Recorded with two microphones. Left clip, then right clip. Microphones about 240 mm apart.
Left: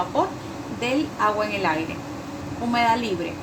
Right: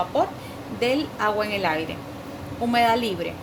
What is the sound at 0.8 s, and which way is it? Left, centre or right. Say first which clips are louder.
Speech: even; right.